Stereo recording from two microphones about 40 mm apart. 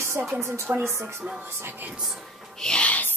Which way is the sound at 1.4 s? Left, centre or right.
Right.